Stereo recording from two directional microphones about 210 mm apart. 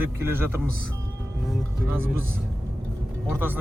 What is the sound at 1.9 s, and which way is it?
Speech, 10° right (ahead or behind).